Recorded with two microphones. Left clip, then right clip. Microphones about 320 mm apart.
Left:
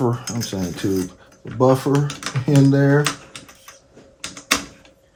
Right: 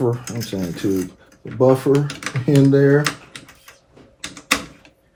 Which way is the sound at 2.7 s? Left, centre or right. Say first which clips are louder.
Right 4 dB; left.